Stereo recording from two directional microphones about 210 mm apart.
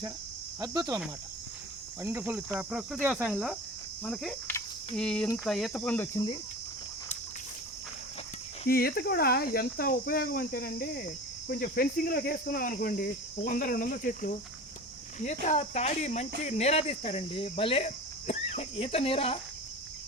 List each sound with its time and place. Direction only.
0.6 s speech: 20° right (ahead or behind)
2.0 s cricket: 10° right (ahead or behind)
4.0 s speech: centre (ahead or behind)
8.6 s speech: 45° left (ahead or behind); by 19.4 s 25° left (ahead or behind)